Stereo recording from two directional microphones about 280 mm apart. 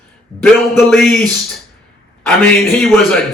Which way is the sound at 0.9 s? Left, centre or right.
Centre.